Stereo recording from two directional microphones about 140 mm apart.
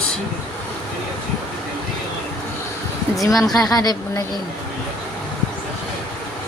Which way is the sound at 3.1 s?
25° left (ahead or behind).